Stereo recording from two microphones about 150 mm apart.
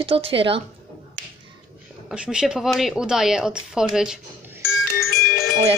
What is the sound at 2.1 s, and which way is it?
A woman's voice, 5° right (ahead or behind).